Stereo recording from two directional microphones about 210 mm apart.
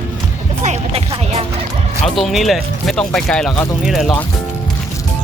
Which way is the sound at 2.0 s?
Centre (ahead or behind).